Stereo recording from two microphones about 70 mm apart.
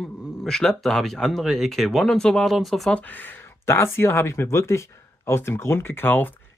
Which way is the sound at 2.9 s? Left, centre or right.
Left.